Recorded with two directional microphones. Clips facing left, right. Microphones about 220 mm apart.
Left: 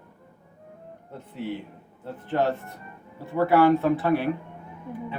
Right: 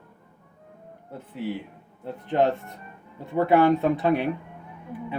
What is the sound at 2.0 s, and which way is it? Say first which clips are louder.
Speech: right 2 dB; 20° right (ahead or behind).